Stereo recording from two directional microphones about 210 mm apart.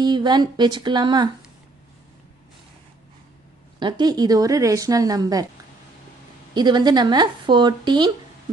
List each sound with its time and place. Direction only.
0.0 s speech: 20° right (ahead or behind)
3.8 s a woman's voice: 20° right (ahead or behind)
6.5 s speech: 20° right (ahead or behind)